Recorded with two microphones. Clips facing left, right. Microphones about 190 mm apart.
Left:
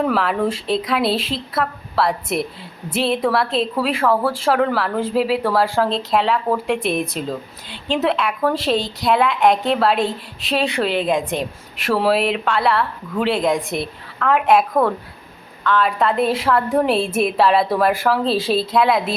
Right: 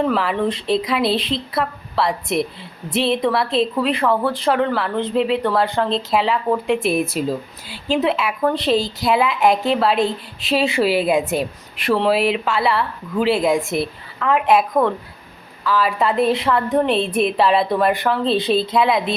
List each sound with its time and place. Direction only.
0.0 s speech: centre (ahead or behind)